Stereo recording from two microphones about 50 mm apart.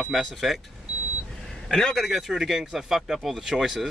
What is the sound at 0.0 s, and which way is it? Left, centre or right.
Speech, centre.